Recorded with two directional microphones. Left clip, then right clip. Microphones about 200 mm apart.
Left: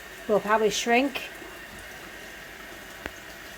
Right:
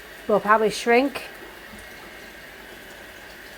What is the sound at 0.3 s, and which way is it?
Speech, 5° right (ahead or behind).